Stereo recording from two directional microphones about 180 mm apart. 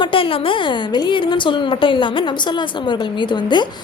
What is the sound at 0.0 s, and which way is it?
A woman's voice, 30° left (ahead or behind).